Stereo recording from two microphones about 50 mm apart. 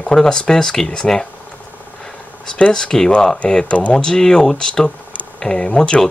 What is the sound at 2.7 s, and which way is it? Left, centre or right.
Speech, centre.